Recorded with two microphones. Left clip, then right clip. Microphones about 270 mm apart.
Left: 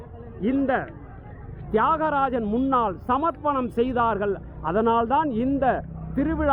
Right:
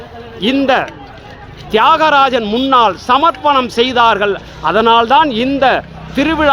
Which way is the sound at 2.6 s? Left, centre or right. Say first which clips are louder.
Right 14 dB; centre.